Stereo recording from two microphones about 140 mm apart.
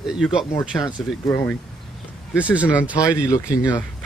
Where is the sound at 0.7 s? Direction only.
20° left (ahead or behind).